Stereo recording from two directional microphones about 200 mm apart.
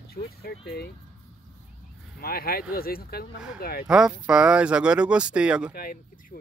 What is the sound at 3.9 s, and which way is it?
Speech, 5° right (ahead or behind).